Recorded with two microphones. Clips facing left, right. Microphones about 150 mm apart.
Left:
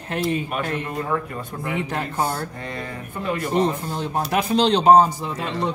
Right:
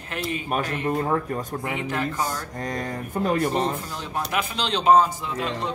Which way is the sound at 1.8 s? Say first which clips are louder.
Left 1 dB; 40° left (ahead or behind).